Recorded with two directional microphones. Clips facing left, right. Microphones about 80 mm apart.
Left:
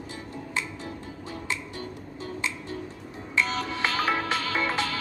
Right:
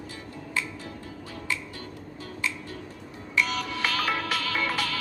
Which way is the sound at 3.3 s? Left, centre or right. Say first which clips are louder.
Even; left.